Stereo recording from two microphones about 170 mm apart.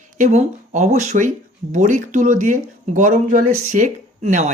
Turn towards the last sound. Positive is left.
turn(degrees=-45)  # may be behind; listen again after turning